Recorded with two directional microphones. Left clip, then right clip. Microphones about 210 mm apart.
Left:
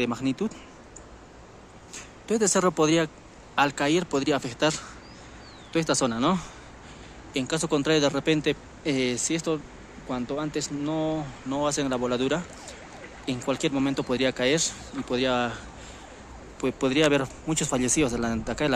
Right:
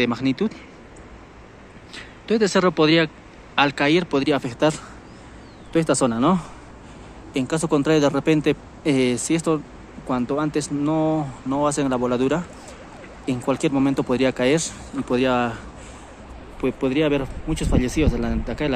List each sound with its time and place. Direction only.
0.0 s a man's voice: 5° left (ahead or behind)
2.2 s a man's voice: 5° left (ahead or behind)
16.6 s speech: 10° left (ahead or behind)